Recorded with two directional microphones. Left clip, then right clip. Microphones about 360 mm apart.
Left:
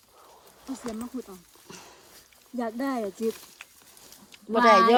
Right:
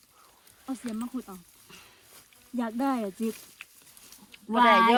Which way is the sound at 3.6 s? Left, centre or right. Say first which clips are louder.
Even; centre.